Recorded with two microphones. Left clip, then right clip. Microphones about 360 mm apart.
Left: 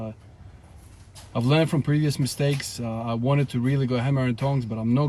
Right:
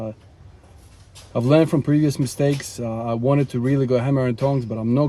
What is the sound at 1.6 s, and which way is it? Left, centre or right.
Speech, centre.